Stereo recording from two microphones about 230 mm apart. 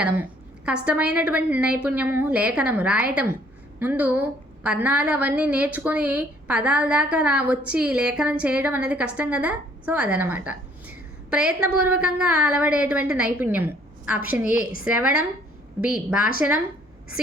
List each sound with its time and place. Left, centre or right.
0.0 s a woman's voice: centre
11.6 s a woman's voice: right
11.9 s a woman's voice: centre